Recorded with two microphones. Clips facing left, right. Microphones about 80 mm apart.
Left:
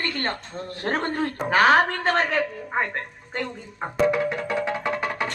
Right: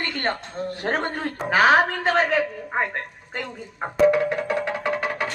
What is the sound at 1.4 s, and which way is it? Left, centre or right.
A woman's voice, centre.